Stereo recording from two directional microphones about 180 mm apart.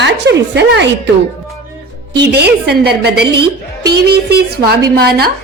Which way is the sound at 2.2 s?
70° right (ahead or behind).